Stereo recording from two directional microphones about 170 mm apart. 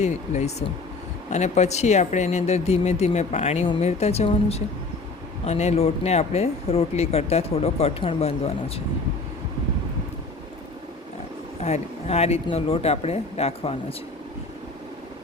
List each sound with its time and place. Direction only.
0.0 s speech: 40° left (ahead or behind)
11.6 s speech: 40° left (ahead or behind)